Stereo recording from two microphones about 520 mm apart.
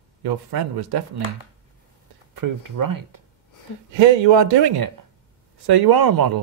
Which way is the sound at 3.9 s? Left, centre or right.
Right.